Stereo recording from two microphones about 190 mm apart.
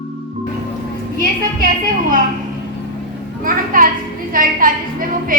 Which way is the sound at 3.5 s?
45° right (ahead or behind).